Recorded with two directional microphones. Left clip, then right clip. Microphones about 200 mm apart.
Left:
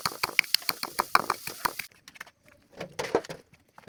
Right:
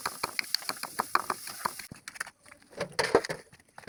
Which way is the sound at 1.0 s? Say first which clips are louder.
Left 4 dB; 65° left (ahead or behind).